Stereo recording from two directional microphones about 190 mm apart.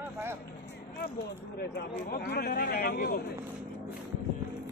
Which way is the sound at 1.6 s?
55° left (ahead or behind).